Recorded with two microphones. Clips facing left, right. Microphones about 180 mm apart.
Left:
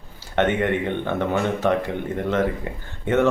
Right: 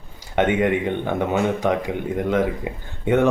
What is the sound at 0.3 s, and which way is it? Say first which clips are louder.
Speech: right 2 dB; 10° right (ahead or behind).